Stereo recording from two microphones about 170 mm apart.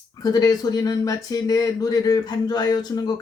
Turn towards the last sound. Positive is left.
turn(degrees=25)  # may be behind; listen again after turning